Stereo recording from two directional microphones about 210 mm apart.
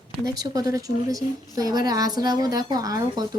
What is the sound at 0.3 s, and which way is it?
A woman's voice, 15° right (ahead or behind).